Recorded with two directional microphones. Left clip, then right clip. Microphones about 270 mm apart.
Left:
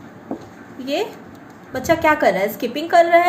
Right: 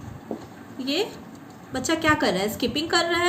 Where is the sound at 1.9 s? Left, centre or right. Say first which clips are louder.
Left 7 dB; right.